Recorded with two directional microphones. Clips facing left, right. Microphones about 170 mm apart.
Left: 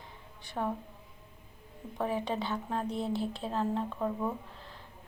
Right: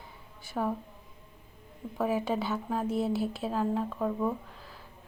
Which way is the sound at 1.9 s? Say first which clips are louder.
Right 3 dB; 5° right (ahead or behind).